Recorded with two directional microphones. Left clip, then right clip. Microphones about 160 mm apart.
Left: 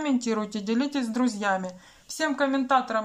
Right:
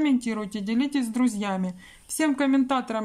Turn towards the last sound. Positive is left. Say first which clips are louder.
# left 1 dB
turn(degrees=-35)  # may be behind; listen again after turning